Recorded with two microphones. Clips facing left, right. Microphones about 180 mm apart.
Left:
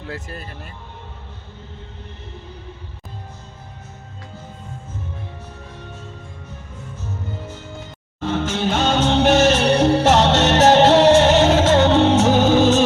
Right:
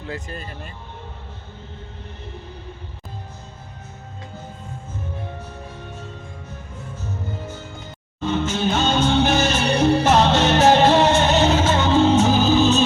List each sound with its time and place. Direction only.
0.1 s speech: 5° left (ahead or behind)
8.2 s music: 80° left